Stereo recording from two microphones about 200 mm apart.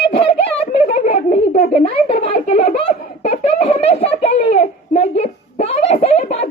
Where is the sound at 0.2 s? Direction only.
30° left (ahead or behind).